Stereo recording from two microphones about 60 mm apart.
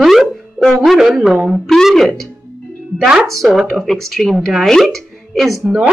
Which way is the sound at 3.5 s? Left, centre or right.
Centre.